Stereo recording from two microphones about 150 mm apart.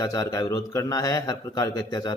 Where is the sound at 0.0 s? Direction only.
25° left (ahead or behind).